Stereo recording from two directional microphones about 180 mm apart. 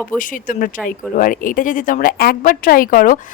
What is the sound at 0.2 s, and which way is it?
A woman's voice, 45° left (ahead or behind).